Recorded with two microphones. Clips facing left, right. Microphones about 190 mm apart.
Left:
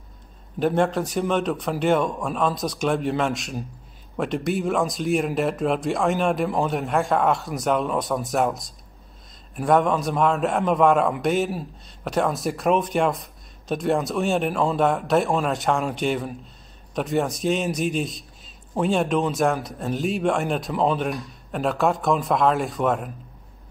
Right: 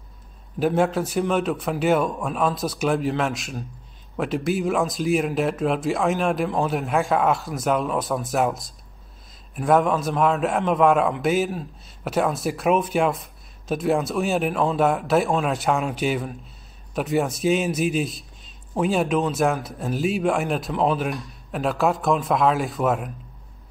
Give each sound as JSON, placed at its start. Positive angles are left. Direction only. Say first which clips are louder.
{"t": 0.6, "sound": "a man's voice", "louder": "even", "side_deg": -5}